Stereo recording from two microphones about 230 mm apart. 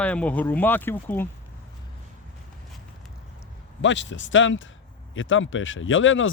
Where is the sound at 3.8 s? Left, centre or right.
Left.